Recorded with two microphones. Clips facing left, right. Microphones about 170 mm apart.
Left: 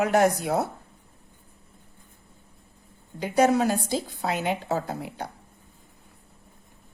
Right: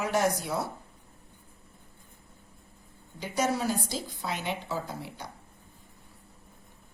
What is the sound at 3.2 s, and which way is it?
A woman's voice, 60° left (ahead or behind).